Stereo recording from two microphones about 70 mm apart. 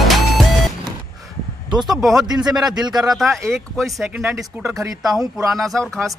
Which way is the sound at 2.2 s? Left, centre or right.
Right.